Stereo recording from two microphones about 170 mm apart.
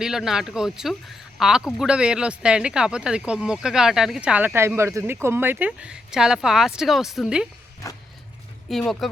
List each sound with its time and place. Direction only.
0.0 s speech: 5° right (ahead or behind)
7.8 s vehicle: 20° left (ahead or behind)
8.7 s speech: centre (ahead or behind)